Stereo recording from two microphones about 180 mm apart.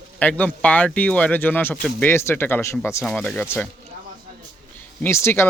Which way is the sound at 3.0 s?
5° left (ahead or behind).